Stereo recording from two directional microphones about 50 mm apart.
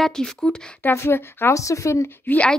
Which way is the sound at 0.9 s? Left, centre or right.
Left.